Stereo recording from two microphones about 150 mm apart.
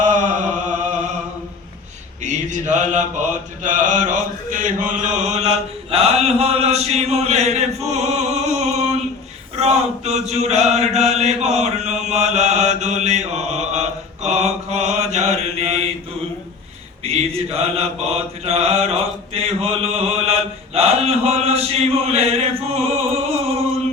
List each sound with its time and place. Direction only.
0.0 s chant: 55° right (ahead or behind)
2.2 s mantra: 55° right (ahead or behind)
7.9 s music: 45° right (ahead or behind)
9.6 s mantra: 45° right (ahead or behind)
17.0 s mantra: 45° right (ahead or behind)